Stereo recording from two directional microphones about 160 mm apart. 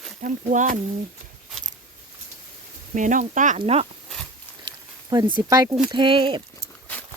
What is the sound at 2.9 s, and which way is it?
Speech, 50° right (ahead or behind).